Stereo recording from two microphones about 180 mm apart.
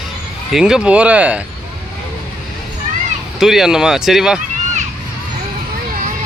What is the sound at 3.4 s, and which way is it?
Speech, centre (ahead or behind).